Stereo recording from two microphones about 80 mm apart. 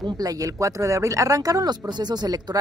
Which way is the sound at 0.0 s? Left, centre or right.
Right.